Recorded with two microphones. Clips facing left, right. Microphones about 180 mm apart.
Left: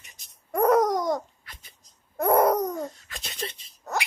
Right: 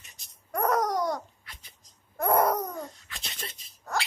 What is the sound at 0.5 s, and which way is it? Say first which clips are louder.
Babbling: left 6 dB; 25° left (ahead or behind).